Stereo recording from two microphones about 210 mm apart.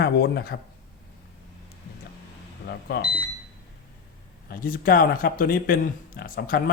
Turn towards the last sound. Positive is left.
turn(degrees=40)  # may be behind; listen again after turning